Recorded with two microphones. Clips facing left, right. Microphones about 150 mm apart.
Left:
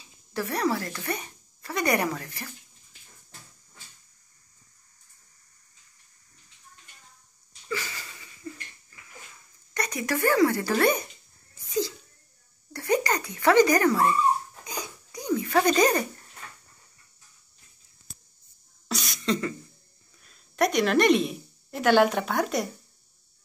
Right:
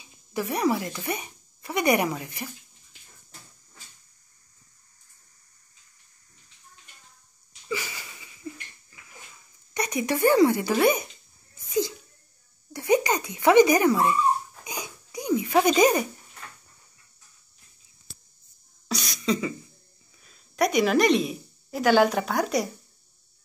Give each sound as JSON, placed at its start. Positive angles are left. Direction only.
{"t": 0.0, "sound": "a woman's voice", "side_deg": -15}
{"t": 7.6, "sound": "wheeze", "side_deg": -10}
{"t": 9.8, "sound": "speech", "side_deg": -20}
{"t": 10.6, "sound": "speech", "side_deg": -10}
{"t": 12.7, "sound": "speech", "side_deg": -15}
{"t": 19.0, "sound": "cough", "side_deg": 0}
{"t": 20.2, "sound": "a woman's voice", "side_deg": 0}